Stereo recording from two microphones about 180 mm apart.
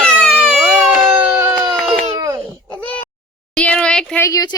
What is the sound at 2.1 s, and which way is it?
Babbling, 20° right (ahead or behind).